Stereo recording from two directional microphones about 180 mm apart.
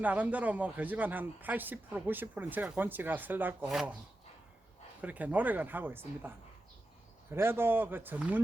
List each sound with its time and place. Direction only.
0.0 s a man's voice: 10° right (ahead or behind)
4.9 s a man's voice: 10° right (ahead or behind)
7.3 s a man's voice: 10° right (ahead or behind)